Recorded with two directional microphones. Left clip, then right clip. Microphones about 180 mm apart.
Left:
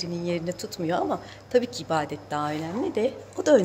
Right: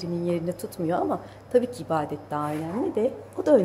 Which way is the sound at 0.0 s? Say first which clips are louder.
Right 1 dB; 10° right (ahead or behind).